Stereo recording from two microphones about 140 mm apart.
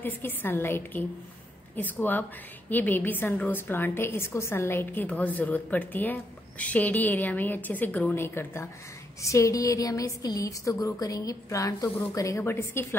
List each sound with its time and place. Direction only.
0.0 s a woman's voice: 15° left (ahead or behind)